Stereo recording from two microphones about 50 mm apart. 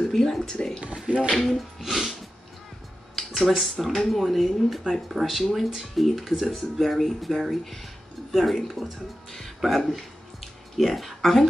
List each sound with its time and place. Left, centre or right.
0.1 s speech: centre
1.0 s speech: right
1.3 s speech: centre
1.8 s a sound: centre
3.2 s a sound: centre
3.8 s speech: centre